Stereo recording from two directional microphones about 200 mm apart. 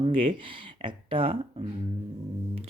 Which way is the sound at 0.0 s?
25° right (ahead or behind).